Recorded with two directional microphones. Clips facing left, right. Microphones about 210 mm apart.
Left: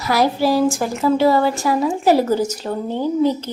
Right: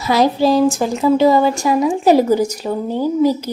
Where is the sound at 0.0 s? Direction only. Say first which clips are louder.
Right 3 dB; 20° right (ahead or behind).